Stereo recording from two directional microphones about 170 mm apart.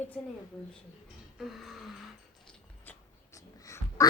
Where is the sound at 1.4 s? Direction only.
Centre (ahead or behind).